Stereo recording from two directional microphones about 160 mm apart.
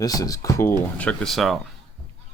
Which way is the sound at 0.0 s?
25° left (ahead or behind).